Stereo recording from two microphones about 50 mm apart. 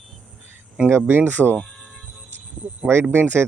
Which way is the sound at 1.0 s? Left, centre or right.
Right.